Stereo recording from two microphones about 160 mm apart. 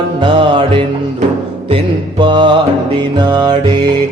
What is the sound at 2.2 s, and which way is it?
Mantra, 30° right (ahead or behind).